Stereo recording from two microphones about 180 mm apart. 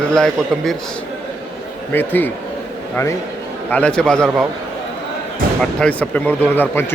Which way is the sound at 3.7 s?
5° left (ahead or behind).